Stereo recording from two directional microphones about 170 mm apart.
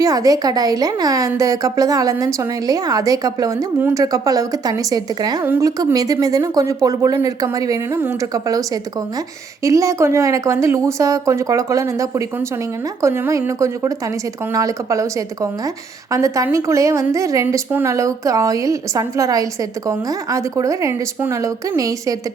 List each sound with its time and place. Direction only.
0.0 s a woman's voice: 20° right (ahead or behind)